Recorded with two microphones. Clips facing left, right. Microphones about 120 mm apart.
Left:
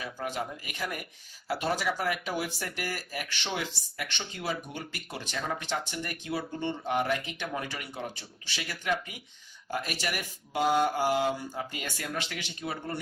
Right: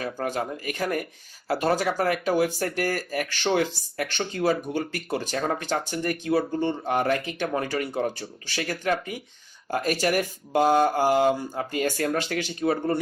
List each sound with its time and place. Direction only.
0.0 s speech: 50° right (ahead or behind)